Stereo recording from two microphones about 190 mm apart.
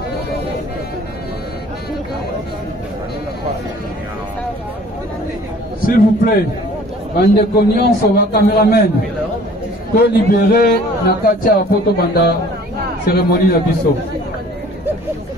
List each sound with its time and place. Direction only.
5.8 s a man's voice: 50° left (ahead or behind)
7.2 s a man's voice: 60° left (ahead or behind)
9.9 s a man's voice: 55° left (ahead or behind)